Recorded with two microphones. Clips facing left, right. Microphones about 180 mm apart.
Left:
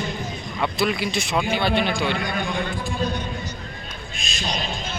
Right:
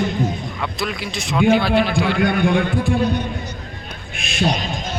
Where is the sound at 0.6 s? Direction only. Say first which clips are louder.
Left 7 dB; centre (ahead or behind).